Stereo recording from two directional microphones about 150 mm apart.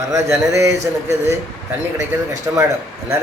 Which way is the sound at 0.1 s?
20° right (ahead or behind).